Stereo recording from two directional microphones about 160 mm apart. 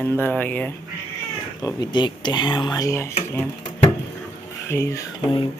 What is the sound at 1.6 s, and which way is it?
Speech, 25° left (ahead or behind).